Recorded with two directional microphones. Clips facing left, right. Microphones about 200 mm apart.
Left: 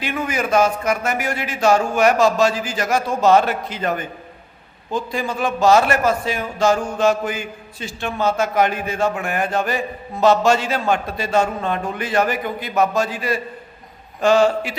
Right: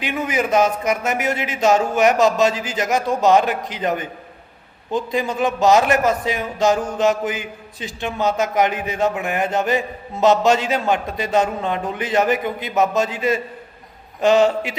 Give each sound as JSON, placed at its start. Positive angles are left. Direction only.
{"t": 0.0, "sound": "a man's voice", "side_deg": -20}